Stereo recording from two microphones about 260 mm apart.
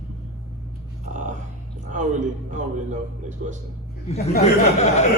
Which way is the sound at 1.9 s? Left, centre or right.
Right.